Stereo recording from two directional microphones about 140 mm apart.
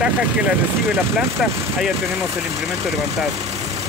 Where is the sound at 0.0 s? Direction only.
10° right (ahead or behind).